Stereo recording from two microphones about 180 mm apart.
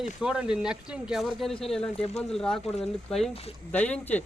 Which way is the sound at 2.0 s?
35° left (ahead or behind).